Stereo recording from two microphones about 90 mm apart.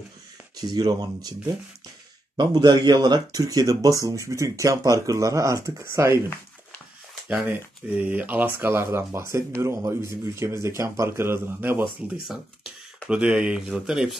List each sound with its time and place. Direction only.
0.6 s speech: 45° right (ahead or behind)
2.3 s speech: 50° right (ahead or behind); by 6.2 s 30° right (ahead or behind)
7.2 s speech: 15° right (ahead or behind)
13.1 s speech: 10° right (ahead or behind)